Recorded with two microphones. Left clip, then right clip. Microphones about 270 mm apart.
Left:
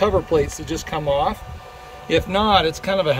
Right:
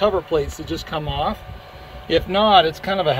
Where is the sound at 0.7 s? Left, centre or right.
Centre.